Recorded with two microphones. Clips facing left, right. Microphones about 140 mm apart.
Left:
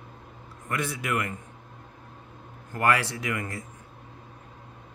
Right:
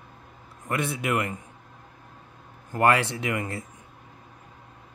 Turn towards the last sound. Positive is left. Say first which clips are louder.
# right 3 dB
turn(degrees=-25)  # may be behind; listen again after turning